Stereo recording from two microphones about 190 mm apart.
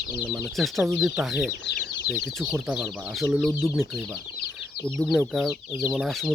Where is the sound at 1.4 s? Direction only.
55° left (ahead or behind).